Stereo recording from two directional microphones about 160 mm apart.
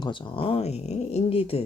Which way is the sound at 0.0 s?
30° left (ahead or behind).